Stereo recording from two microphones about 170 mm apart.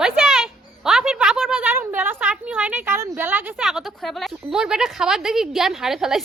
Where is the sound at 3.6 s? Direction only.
Centre (ahead or behind).